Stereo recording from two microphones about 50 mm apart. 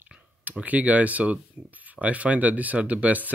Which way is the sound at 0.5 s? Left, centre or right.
Right.